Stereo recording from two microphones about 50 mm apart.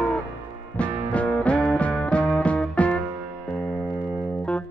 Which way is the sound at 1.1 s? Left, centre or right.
Left.